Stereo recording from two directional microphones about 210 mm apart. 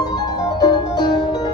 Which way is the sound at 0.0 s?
20° left (ahead or behind).